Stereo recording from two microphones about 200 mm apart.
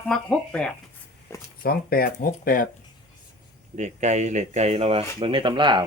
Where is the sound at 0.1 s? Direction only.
5° left (ahead or behind).